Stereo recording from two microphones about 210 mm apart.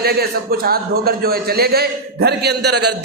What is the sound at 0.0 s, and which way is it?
A man's voice, 45° right (ahead or behind).